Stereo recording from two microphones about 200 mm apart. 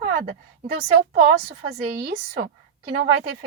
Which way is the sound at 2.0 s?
50° right (ahead or behind).